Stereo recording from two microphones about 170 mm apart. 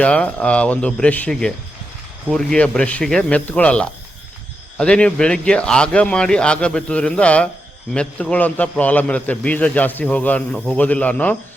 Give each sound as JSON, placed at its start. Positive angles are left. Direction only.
{"t": 0.0, "sound": "a man's voice", "side_deg": 5}